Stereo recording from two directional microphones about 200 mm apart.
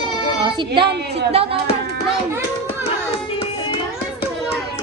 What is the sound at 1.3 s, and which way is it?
Speech, 30° right (ahead or behind).